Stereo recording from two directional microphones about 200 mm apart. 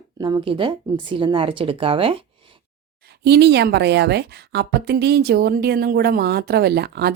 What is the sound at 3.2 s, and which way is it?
A woman's voice, 55° right (ahead or behind).